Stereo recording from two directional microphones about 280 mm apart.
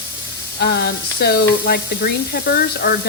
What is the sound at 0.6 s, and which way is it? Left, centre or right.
Speech, left.